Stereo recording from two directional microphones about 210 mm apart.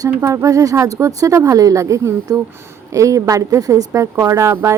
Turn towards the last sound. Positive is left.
turn(degrees=-15)  # may be behind; listen again after turning